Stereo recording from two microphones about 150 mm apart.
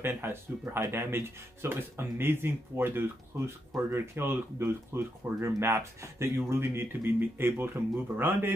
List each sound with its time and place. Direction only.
0.0 s speech: 15° right (ahead or behind)